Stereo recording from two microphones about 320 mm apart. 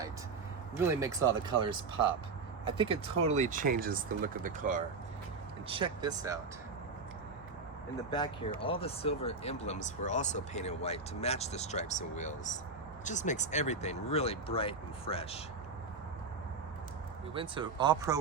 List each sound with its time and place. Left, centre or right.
0.8 s speech: centre
2.6 s speech: centre
8.1 s speech: centre
17.3 s speech: centre